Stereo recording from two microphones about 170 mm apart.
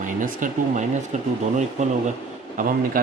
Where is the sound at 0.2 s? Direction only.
50° right (ahead or behind).